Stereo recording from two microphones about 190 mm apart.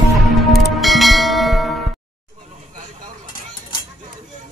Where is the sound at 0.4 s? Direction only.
Centre (ahead or behind).